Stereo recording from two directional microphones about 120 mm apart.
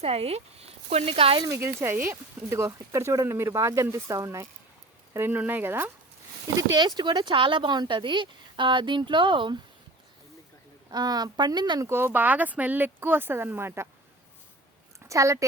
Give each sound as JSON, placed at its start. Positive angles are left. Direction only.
{"t": 0.0, "sound": "speech", "side_deg": -60}
{"t": 1.5, "sound": "speech", "side_deg": -20}
{"t": 6.6, "sound": "speech", "side_deg": -35}
{"t": 10.8, "sound": "speech", "side_deg": -35}
{"t": 11.9, "sound": "speech", "side_deg": -20}
{"t": 14.9, "sound": "a sound", "side_deg": -25}